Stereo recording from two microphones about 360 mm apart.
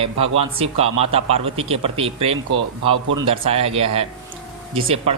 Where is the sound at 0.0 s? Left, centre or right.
Centre.